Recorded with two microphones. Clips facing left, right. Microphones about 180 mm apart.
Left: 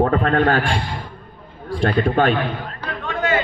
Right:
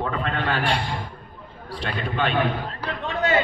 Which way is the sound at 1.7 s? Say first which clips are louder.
Left 10 dB; 45° left (ahead or behind).